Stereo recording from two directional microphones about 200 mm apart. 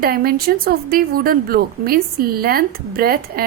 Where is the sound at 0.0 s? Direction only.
50° right (ahead or behind).